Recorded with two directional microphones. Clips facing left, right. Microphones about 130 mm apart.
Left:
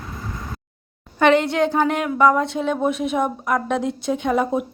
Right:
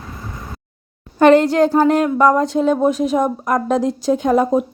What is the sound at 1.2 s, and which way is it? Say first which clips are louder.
A woman's voice: right 5 dB; 40° right (ahead or behind).